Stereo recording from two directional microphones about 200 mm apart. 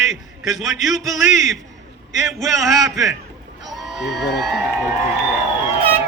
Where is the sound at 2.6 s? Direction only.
15° right (ahead or behind).